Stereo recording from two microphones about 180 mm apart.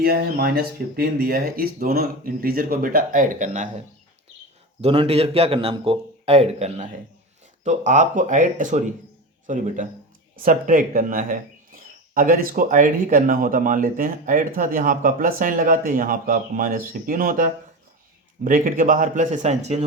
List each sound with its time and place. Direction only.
0.0 s speech: 60° right (ahead or behind); by 3.7 s 45° right (ahead or behind)
4.8 s a man's voice: 35° right (ahead or behind)